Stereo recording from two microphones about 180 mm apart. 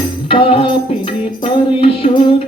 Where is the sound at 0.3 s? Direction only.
30° left (ahead or behind).